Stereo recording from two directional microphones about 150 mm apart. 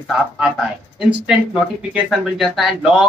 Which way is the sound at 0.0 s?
Centre (ahead or behind).